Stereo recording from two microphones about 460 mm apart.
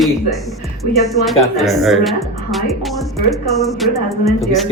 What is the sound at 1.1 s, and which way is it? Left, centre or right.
Speech, centre.